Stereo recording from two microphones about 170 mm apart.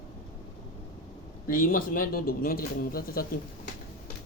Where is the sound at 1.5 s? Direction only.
55° left (ahead or behind).